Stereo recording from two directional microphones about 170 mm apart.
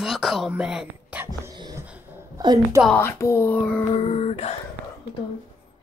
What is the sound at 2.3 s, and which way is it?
Speech, 20° right (ahead or behind).